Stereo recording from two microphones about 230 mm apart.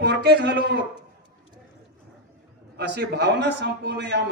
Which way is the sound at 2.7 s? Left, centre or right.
Right.